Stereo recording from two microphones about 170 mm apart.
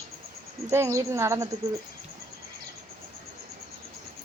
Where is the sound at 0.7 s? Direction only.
15° right (ahead or behind).